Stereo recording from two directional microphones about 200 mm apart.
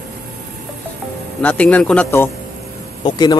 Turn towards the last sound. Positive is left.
turn(degrees=20)  # may be behind; listen again after turning